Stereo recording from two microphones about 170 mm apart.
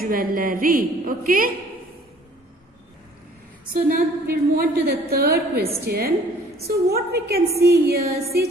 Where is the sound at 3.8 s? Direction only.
60° right (ahead or behind).